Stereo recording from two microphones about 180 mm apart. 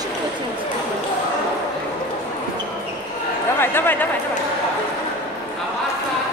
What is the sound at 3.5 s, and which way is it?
Speech, 10° left (ahead or behind).